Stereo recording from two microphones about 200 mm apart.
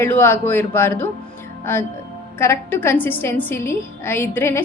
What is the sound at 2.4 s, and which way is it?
A woman's voice, 10° left (ahead or behind).